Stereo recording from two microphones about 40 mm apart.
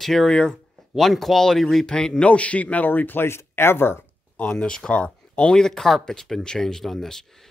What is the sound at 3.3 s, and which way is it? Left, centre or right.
Speech, left.